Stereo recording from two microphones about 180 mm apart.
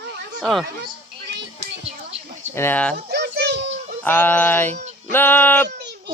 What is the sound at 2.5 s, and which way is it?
Speech, 10° left (ahead or behind).